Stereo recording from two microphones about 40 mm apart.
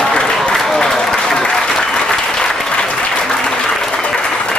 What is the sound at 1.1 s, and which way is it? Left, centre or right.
Applause, centre.